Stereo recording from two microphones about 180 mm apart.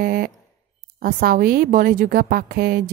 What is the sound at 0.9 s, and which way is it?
Speech, 55° right (ahead or behind).